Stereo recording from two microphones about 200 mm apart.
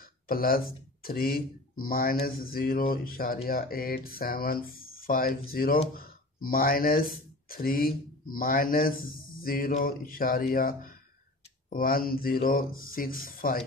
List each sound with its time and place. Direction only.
0.0 s speech: 45° left (ahead or behind)